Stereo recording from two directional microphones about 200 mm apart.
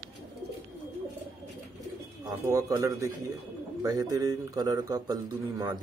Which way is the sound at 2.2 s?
15° right (ahead or behind).